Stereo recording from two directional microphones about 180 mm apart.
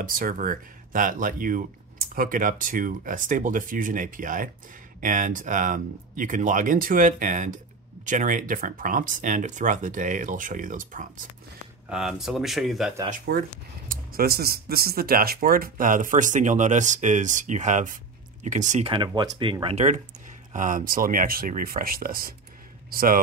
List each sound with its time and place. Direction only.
0.0 s speech: 50° right (ahead or behind)
11.9 s speech: 5° right (ahead or behind)
13.3 s a man's voice: 55° right (ahead or behind)